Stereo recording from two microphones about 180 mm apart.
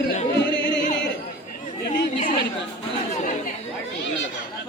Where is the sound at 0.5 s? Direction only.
90° left.